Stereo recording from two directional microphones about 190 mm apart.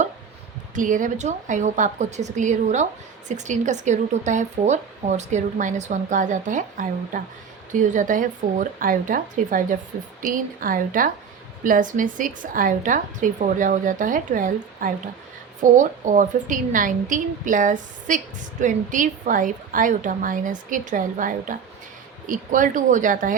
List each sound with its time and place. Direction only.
0.8 s a woman's voice: 45° right (ahead or behind)